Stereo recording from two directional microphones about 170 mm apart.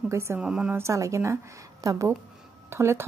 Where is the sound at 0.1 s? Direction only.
15° right (ahead or behind).